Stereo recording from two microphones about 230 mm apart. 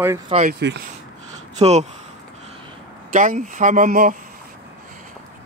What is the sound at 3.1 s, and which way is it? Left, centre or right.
Speech, right.